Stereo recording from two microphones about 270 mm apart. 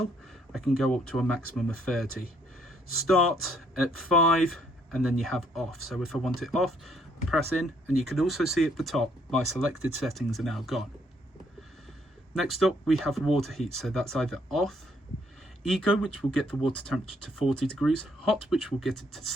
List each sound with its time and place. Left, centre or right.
0.5 s speech: centre
3.1 s speech: centre
12.4 s speech: centre